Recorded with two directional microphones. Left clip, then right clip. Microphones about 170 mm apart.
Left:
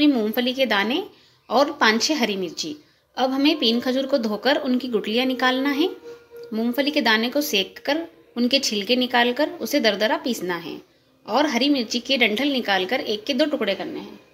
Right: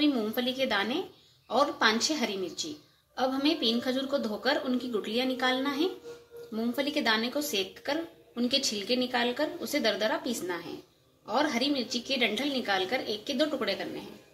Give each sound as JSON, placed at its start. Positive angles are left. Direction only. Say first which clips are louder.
{"t": 0.0, "sound": "a woman's voice", "louder": "left 8 dB", "side_deg": 50}